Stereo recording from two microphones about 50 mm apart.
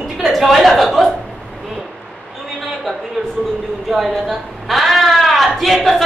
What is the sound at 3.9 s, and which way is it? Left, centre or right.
A woman's voice, centre.